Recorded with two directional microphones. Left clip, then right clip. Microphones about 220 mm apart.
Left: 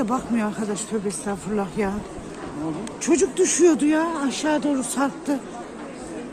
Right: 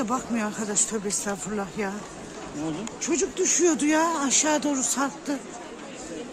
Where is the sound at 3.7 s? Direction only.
10° right (ahead or behind).